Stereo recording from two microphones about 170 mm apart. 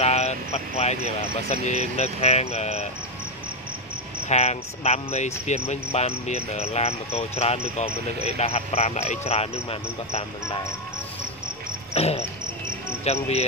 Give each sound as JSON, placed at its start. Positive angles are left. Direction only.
{"t": 0.0, "sound": "speech", "side_deg": 40}
{"t": 4.3, "sound": "speech", "side_deg": 40}
{"t": 11.9, "sound": "speech", "side_deg": 40}